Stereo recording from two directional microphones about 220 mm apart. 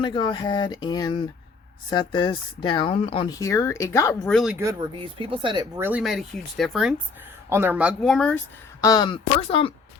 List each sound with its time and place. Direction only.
0.0 s speech: 20° left (ahead or behind)
4.4 s speech: 5° right (ahead or behind)
4.6 s speech: 25° right (ahead or behind)
5.8 s speech: 5° right (ahead or behind)
8.8 s speech: 20° left (ahead or behind)